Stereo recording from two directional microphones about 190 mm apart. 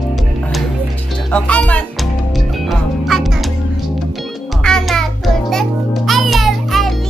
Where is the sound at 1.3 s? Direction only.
5° left (ahead or behind).